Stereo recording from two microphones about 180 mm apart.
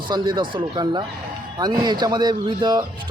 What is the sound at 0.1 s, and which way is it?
A man's voice, 25° right (ahead or behind).